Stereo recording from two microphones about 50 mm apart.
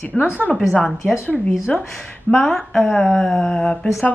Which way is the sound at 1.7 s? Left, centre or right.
Left.